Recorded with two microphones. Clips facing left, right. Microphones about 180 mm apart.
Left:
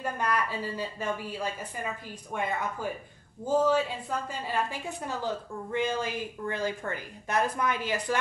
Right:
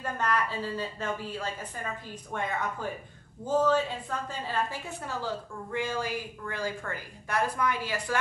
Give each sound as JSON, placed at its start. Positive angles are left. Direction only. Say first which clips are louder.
{"t": 0.0, "sound": "a woman's voice", "louder": "even", "side_deg": 10}